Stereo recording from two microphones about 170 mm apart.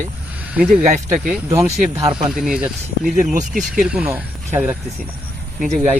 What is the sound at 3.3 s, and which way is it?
Speech, 50° right (ahead or behind).